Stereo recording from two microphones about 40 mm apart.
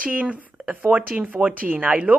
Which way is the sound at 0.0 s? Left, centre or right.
Right.